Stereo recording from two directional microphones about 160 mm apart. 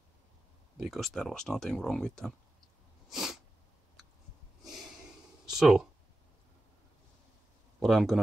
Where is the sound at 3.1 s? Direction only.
Centre (ahead or behind).